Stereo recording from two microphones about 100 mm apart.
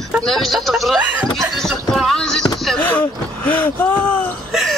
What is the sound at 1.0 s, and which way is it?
Speech, 15° right (ahead or behind).